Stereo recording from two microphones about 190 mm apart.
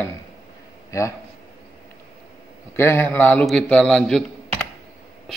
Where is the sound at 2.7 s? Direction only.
10° left (ahead or behind).